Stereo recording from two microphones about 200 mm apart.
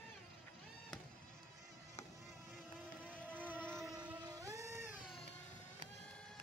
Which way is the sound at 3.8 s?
5° right (ahead or behind).